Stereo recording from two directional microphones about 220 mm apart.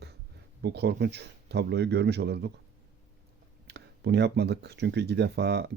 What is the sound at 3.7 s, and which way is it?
Speech, 50° right (ahead or behind).